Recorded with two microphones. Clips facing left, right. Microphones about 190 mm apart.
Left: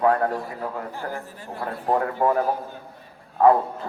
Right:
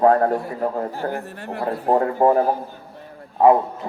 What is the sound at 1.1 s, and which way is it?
Speech, 65° right (ahead or behind).